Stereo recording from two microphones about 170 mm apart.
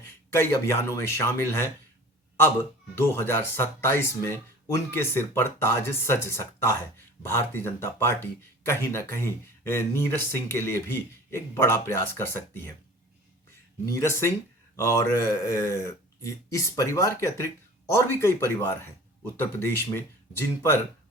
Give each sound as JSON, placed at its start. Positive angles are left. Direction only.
{"t": 0.0, "sound": "speech", "side_deg": 15}
{"t": 13.8, "sound": "speech", "side_deg": 15}